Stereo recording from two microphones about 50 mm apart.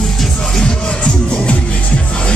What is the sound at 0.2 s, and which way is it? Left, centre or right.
Music, centre.